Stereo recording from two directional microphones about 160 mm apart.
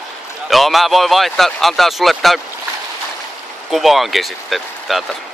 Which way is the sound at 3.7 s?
Centre (ahead or behind).